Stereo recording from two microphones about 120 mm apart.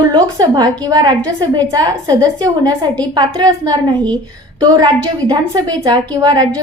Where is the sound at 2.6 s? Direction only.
10° left (ahead or behind).